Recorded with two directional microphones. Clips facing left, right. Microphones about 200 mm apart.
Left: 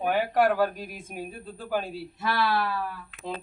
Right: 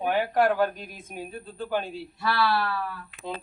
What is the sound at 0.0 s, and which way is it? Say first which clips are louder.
Speech: even; centre (ahead or behind).